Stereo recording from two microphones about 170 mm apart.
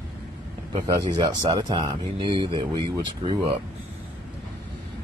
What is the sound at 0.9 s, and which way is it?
Speech, 25° right (ahead or behind).